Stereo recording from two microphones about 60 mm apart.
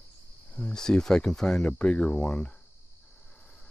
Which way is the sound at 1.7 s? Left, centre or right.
Left.